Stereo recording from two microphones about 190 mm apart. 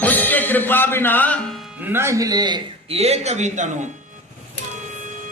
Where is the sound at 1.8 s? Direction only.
10° right (ahead or behind); by 3.7 s 40° right (ahead or behind).